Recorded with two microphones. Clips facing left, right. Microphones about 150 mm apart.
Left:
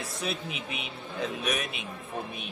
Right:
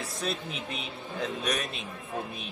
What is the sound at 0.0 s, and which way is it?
Speech, 5° left (ahead or behind).